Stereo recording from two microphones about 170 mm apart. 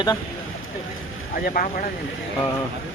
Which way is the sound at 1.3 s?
55° left (ahead or behind).